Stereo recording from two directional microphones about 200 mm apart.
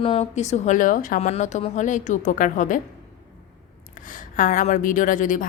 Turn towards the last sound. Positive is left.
turn(degrees=40)  # may be behind; listen again after turning